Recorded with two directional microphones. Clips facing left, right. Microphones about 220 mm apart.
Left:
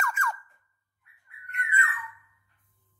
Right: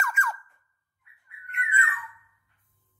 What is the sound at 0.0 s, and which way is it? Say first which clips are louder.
Squeak: even; centre (ahead or behind).